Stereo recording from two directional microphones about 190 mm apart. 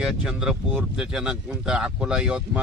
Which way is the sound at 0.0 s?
5° right (ahead or behind).